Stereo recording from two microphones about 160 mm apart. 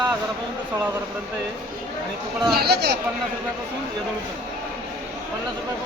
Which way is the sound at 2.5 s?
90° right.